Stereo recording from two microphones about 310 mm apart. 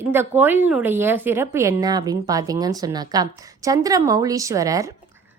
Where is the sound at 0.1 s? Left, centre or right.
Centre.